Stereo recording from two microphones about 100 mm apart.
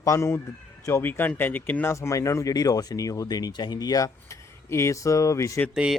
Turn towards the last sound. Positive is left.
turn(degrees=-10)  # may be behind; listen again after turning